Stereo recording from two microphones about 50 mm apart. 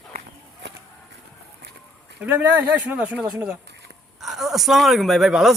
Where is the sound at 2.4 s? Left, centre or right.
Right.